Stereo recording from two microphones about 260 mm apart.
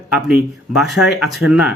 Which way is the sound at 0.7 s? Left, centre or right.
Centre.